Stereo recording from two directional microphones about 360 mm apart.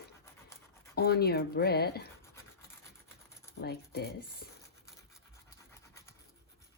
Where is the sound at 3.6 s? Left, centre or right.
Left.